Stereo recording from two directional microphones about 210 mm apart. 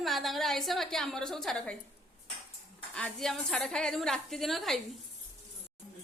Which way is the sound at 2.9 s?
5° left (ahead or behind).